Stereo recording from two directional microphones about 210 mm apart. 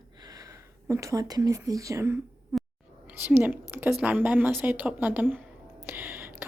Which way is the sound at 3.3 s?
10° right (ahead or behind).